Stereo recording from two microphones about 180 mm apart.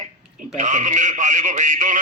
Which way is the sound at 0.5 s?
45° right (ahead or behind).